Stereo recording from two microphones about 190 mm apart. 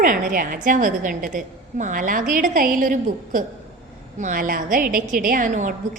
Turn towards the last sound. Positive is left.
turn(degrees=-45)  # may be behind; listen again after turning